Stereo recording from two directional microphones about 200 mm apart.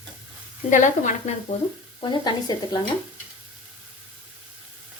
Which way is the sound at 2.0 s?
20° left (ahead or behind).